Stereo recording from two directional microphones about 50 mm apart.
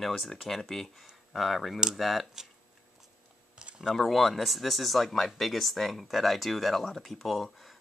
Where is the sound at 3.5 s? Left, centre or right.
Centre.